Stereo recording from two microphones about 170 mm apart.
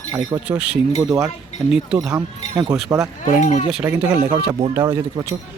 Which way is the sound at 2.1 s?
20° right (ahead or behind).